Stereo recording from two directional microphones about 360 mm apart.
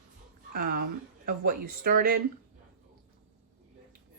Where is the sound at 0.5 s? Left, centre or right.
Right.